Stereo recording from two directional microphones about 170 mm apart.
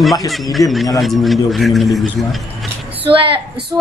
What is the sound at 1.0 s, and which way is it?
A man's voice, centre (ahead or behind).